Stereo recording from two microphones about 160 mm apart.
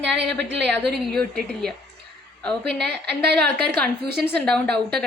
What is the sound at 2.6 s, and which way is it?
A woman's voice, 90° right.